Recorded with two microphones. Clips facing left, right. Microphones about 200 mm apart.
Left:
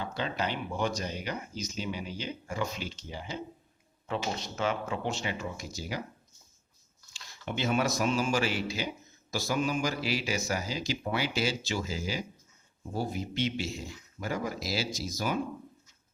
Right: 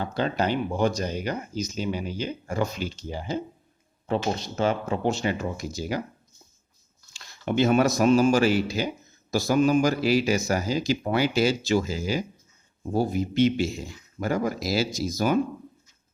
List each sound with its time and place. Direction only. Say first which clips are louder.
0.0 s speech: right 7 dB; 45° right (ahead or behind)
7.4 s speech: right 9 dB; 50° right (ahead or behind)